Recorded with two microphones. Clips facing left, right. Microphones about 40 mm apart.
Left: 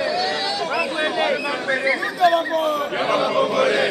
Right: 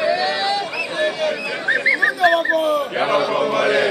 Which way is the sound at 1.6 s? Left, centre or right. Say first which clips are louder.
Right 4 dB; right.